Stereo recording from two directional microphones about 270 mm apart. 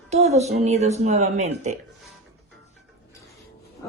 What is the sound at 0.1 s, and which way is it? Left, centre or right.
Speech, right.